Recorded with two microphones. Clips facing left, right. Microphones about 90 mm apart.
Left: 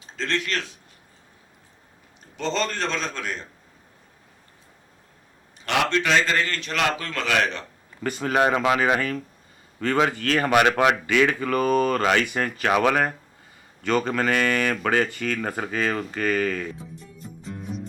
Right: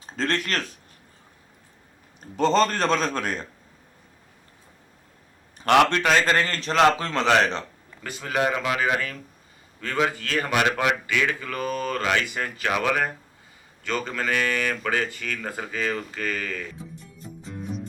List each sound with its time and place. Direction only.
0.0 s speech: 45° right (ahead or behind)
2.3 s a man's voice: 45° right (ahead or behind)
5.5 s a man's voice: 50° right (ahead or behind); by 7.6 s 30° right (ahead or behind)
8.0 s speech: 50° left (ahead or behind)
16.7 s music: centre (ahead or behind)